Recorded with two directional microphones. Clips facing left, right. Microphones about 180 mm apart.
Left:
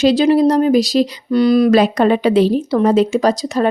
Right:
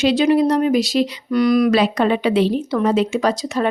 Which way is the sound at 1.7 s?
45° left (ahead or behind).